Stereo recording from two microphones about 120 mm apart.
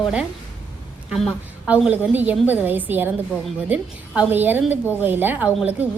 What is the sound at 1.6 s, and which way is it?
A woman's voice, 10° right (ahead or behind).